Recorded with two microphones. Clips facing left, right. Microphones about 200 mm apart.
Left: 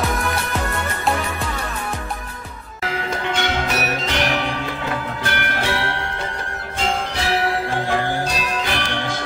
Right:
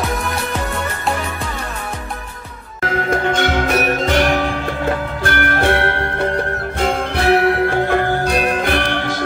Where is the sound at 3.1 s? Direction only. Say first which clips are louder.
Right 6 dB; 50° right (ahead or behind).